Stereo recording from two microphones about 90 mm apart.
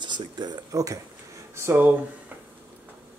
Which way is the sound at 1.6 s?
25° right (ahead or behind).